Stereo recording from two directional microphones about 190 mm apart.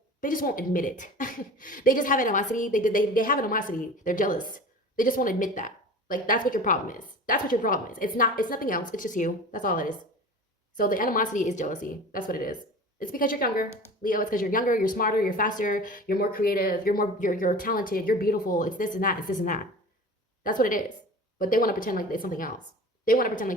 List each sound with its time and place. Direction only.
0.2 s speech: 45° left (ahead or behind)